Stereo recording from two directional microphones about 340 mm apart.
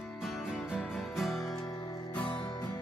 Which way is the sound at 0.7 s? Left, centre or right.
Centre.